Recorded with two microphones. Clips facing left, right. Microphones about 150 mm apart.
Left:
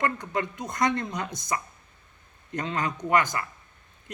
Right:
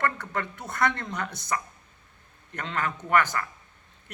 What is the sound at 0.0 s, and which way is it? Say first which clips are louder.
Speech: left 1 dB; 15° left (ahead or behind).